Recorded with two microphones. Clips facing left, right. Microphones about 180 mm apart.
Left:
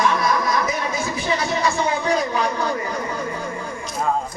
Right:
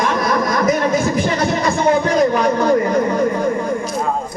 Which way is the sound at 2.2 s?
55° right (ahead or behind).